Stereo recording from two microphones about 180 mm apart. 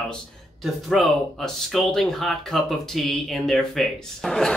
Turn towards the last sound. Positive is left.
turn(degrees=0)  # may be behind; listen again after turning